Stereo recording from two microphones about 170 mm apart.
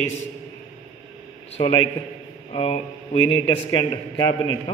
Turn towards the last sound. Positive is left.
turn(degrees=25)  # may be behind; listen again after turning